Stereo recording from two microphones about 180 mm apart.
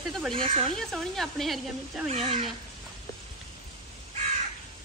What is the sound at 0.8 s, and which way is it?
Speech, centre (ahead or behind).